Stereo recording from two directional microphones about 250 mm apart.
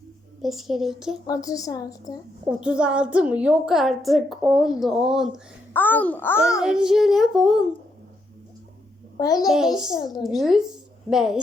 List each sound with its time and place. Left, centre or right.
0.4 s a woman's voice: centre
1.3 s a woman's voice: centre
2.5 s a woman's voice: centre
6.6 s a woman's voice: centre
9.1 s a woman's voice: centre
9.5 s a woman's voice: centre